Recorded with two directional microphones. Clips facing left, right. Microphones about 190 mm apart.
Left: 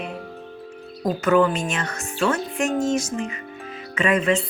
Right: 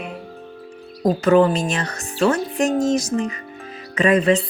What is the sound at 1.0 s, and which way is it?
Speech, 35° right (ahead or behind).